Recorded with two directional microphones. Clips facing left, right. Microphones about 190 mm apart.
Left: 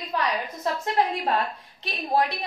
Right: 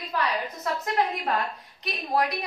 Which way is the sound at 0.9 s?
30° left (ahead or behind).